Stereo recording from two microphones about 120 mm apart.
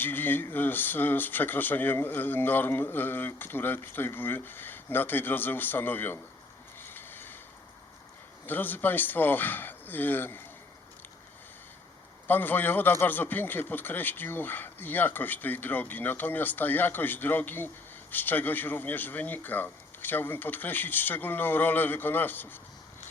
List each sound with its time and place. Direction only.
0.0 s speech: 15° left (ahead or behind)
6.8 s a sound: 15° left (ahead or behind)
8.4 s speech: 15° left (ahead or behind)
12.3 s speech: 15° left (ahead or behind)